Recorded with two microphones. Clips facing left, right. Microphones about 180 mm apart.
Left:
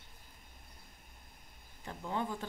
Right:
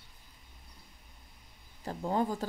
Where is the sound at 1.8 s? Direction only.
40° right (ahead or behind).